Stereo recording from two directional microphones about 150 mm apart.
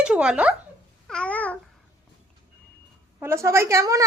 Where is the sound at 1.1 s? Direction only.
5° left (ahead or behind).